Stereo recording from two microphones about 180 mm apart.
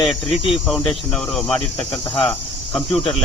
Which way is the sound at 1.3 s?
5° left (ahead or behind).